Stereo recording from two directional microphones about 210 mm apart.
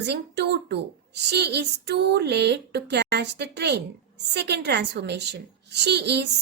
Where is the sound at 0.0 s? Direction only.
55° right (ahead or behind).